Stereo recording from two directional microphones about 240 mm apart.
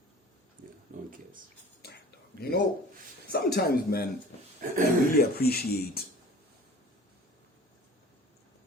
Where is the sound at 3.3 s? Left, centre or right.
Left.